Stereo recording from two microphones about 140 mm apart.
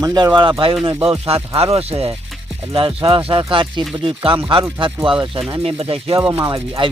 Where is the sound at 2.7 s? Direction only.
40° right (ahead or behind).